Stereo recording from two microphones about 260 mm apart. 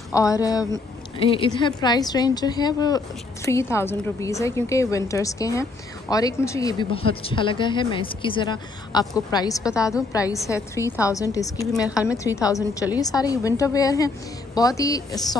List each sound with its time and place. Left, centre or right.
0.1 s a woman's voice: centre
11.9 s a woman's voice: centre
12.4 s a woman's voice: centre